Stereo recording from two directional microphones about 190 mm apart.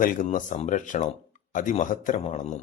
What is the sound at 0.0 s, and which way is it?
Speech, 45° left (ahead or behind).